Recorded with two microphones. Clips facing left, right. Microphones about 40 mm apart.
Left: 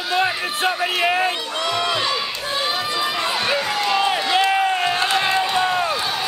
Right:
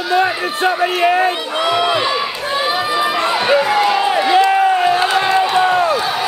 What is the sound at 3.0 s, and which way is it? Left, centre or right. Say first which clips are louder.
Run: right 6 dB; centre.